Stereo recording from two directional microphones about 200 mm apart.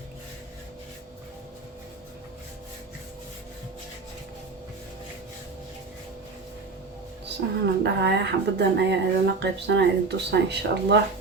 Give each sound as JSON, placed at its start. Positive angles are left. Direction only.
{"t": 7.6, "sound": "speech", "side_deg": -60}